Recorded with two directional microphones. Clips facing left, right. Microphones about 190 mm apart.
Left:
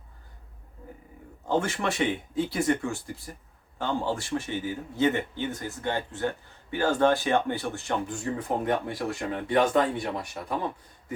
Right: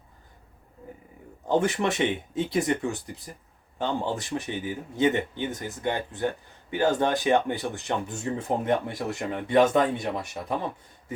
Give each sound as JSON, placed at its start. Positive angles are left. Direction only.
{"t": 1.5, "sound": "speech", "side_deg": -20}